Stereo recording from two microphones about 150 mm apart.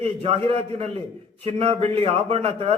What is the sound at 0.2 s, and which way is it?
A man's voice, 40° right (ahead or behind).